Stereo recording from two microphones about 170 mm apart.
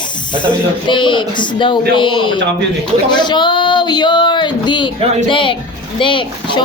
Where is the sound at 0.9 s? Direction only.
30° left (ahead or behind).